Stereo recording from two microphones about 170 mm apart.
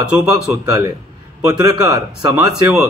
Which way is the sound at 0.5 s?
20° right (ahead or behind).